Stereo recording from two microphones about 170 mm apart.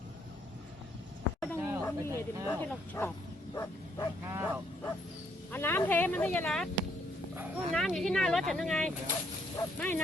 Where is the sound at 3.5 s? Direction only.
20° left (ahead or behind).